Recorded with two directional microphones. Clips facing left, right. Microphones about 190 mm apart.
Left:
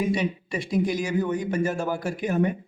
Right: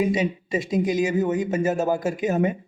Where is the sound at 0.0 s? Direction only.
20° right (ahead or behind).